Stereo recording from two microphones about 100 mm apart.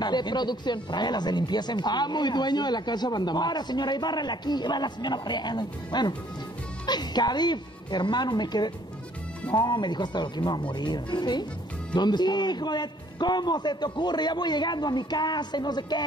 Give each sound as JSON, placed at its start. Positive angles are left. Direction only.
{"t": 0.0, "sound": "speech", "side_deg": 45}